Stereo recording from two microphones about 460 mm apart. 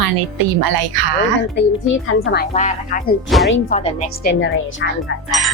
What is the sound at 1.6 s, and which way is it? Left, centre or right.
Speech, left.